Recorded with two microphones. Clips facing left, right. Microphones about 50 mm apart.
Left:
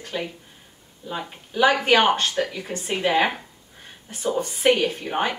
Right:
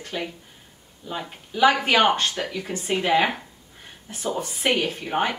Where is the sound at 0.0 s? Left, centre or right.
Centre.